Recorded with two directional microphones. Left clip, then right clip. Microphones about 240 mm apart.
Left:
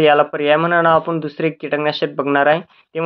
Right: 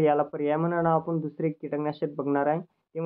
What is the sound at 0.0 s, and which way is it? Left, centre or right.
Speech, centre.